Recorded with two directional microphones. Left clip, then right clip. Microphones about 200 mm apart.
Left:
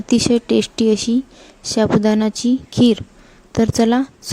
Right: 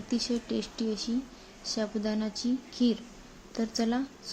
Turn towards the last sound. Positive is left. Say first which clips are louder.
# left 15 dB
turn(degrees=55)  # may be behind; listen again after turning